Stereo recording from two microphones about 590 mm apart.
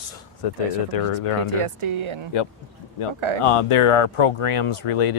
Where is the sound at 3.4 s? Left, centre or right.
Left.